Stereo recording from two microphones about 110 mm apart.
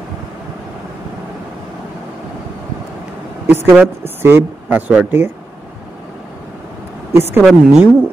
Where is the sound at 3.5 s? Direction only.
20° right (ahead or behind).